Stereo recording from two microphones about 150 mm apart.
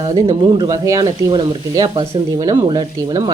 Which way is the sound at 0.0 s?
25° right (ahead or behind).